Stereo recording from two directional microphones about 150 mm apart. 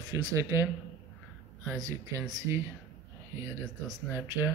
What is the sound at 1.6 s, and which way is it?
Speech, 25° right (ahead or behind).